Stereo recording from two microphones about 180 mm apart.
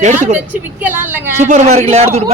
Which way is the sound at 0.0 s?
45° right (ahead or behind).